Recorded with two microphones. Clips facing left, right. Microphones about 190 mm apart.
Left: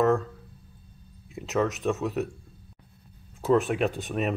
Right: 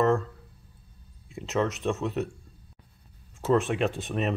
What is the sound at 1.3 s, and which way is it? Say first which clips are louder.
Speech: left 1 dB; centre (ahead or behind).